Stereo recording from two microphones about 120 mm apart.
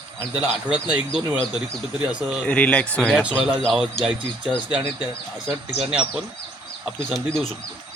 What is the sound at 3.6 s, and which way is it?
Speech, centre (ahead or behind).